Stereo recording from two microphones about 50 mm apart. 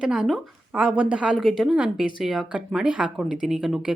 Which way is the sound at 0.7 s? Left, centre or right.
Right.